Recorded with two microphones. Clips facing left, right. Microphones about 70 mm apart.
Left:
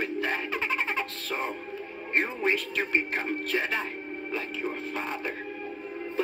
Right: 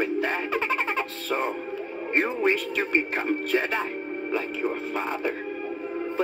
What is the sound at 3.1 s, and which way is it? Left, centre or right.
Music, centre.